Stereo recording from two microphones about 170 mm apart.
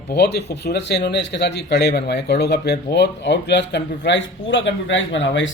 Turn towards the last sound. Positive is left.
turn(degrees=90)